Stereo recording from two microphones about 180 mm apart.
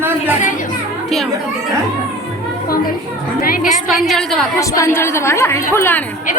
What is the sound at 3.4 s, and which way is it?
Speech, 50° left (ahead or behind).